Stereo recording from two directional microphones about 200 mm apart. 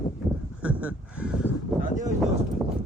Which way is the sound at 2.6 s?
Centre (ahead or behind).